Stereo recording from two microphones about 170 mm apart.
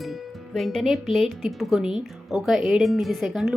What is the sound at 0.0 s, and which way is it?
Speech, centre (ahead or behind).